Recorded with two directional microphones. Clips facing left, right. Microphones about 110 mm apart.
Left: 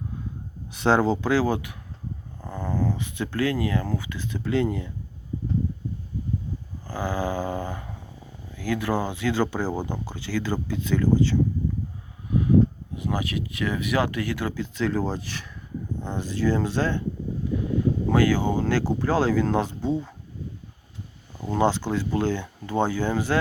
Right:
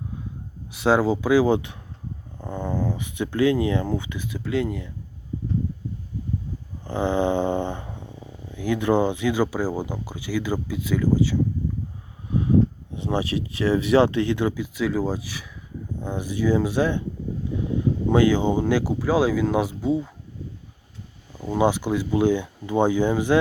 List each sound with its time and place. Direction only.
0.7 s speech: 5° right (ahead or behind)
4.3 s speech: 5° right (ahead or behind)
6.8 s dog: 25° right (ahead or behind)
8.5 s speech: 20° right (ahead or behind)
12.3 s speech: 25° right (ahead or behind)
18.1 s speech: 20° right (ahead or behind)
21.3 s speech: 10° right (ahead or behind)